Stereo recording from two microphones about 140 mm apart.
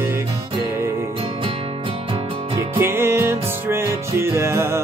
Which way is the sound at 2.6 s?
20° right (ahead or behind).